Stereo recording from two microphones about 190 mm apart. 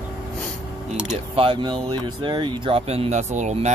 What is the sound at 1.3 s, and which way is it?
Speech, 25° right (ahead or behind).